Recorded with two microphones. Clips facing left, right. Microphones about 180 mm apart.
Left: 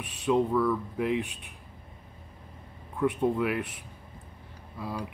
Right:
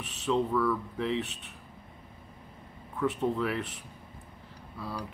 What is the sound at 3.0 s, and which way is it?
A man's voice, 10° left (ahead or behind).